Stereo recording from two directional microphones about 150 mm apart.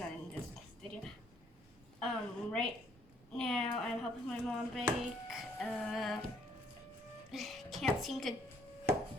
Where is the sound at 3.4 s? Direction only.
5° left (ahead or behind).